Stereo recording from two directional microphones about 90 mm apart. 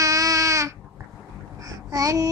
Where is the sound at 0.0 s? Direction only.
40° right (ahead or behind).